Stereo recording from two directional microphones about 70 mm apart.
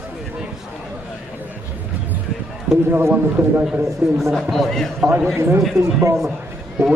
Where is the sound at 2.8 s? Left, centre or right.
Right.